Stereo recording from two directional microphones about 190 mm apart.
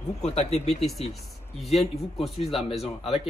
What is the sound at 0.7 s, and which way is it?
A man's voice, centre (ahead or behind).